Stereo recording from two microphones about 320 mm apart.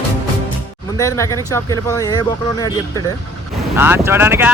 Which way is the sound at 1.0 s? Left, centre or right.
Centre.